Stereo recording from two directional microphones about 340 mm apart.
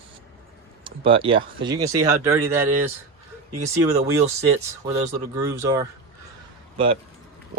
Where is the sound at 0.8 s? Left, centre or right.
Centre.